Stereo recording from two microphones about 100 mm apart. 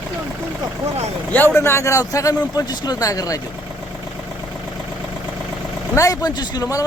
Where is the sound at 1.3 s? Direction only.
25° left (ahead or behind).